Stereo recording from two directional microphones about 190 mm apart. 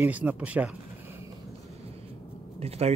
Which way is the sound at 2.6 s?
35° right (ahead or behind).